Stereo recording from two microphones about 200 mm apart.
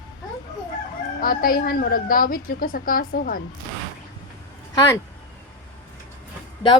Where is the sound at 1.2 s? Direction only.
45° left (ahead or behind).